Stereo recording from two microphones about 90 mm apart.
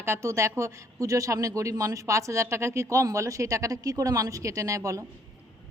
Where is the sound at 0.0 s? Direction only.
30° right (ahead or behind).